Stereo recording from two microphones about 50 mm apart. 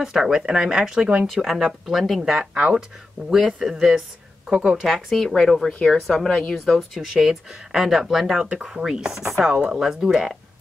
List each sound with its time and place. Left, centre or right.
0.0 s speech: centre
4.8 s speech: centre
5.7 s speech: left
5.9 s a woman's voice: centre
6.9 s speech: centre